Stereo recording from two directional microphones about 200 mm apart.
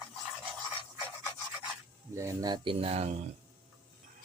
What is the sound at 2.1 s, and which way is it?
Speech, 15° right (ahead or behind).